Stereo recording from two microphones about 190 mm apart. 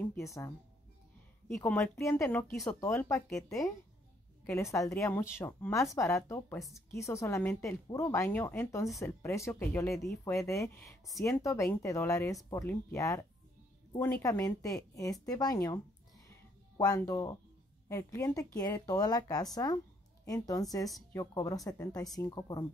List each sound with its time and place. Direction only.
0.0 s speech: 10° left (ahead or behind)
1.6 s a woman's voice: 15° left (ahead or behind)
4.5 s a woman's voice: 15° left (ahead or behind)
14.2 s a woman's voice: 15° left (ahead or behind)
16.3 s music: 20° left (ahead or behind)
17.8 s a woman's voice: 15° left (ahead or behind)